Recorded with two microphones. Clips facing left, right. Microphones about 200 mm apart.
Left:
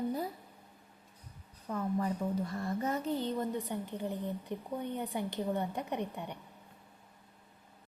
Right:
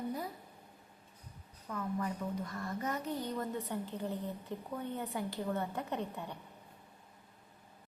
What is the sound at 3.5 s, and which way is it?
Speech, 15° left (ahead or behind).